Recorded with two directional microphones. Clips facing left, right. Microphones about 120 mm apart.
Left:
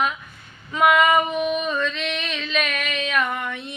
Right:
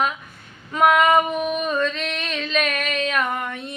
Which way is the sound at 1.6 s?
40° right (ahead or behind).